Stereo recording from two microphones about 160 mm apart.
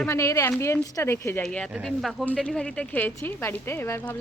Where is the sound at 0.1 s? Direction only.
20° left (ahead or behind).